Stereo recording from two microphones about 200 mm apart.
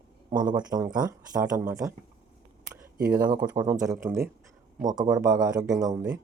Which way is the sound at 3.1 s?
20° right (ahead or behind).